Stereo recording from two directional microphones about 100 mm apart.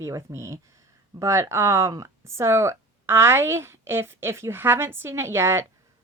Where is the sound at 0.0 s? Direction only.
30° right (ahead or behind).